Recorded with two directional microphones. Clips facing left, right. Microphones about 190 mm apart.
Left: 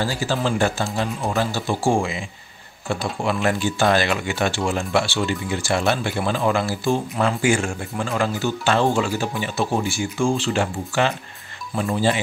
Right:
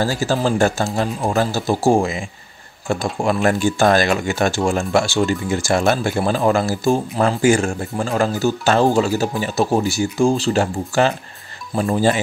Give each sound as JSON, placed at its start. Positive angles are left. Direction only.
{"t": 0.0, "sound": "speech", "side_deg": -45}